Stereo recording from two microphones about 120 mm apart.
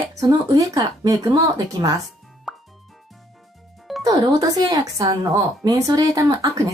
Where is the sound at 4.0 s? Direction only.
30° right (ahead or behind).